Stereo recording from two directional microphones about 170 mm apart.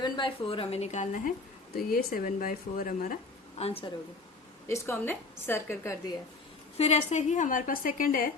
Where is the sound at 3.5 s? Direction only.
35° left (ahead or behind).